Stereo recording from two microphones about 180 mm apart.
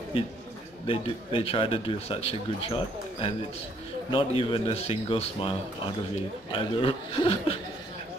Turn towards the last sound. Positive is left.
turn(degrees=30)  # may be behind; listen again after turning